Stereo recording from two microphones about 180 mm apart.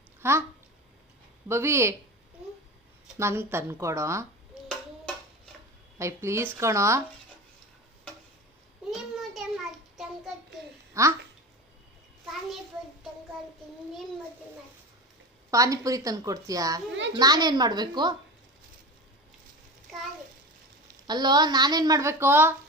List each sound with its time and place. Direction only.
0.2 s speech: 15° right (ahead or behind)
1.5 s a woman's voice: 15° right (ahead or behind)
3.2 s a woman's voice: 15° right (ahead or behind)
6.0 s a woman's voice: 15° right (ahead or behind)
8.9 s child singing: centre (ahead or behind)
11.0 s a woman's voice: 15° right (ahead or behind)
15.4 s a woman's voice: 20° right (ahead or behind)
19.9 s a sound: centre (ahead or behind)
21.1 s a woman's voice: 25° right (ahead or behind)